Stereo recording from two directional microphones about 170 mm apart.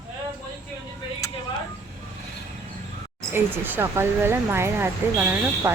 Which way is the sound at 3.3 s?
10° right (ahead or behind).